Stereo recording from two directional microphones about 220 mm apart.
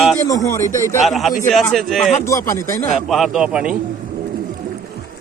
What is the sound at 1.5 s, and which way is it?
Speech, centre (ahead or behind).